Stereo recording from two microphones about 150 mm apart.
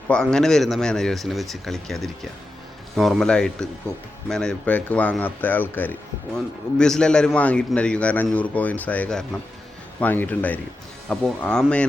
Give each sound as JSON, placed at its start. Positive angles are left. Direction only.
{"t": 0.1, "sound": "speech", "side_deg": 5}
{"t": 3.9, "sound": "speech", "side_deg": -20}
{"t": 4.3, "sound": "speech", "side_deg": 5}